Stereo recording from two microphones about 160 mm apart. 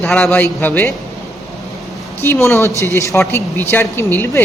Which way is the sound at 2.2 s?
15° left (ahead or behind).